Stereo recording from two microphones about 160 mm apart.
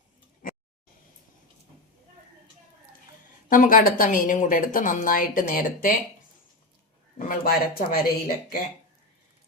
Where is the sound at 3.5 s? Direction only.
55° left (ahead or behind).